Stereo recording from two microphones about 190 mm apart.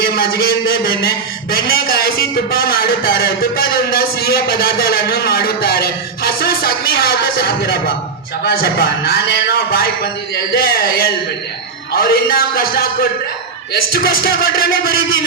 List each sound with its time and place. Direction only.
0.0 s a man's voice: 50° left (ahead or behind)